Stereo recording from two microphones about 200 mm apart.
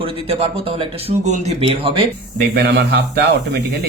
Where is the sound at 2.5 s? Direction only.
55° right (ahead or behind).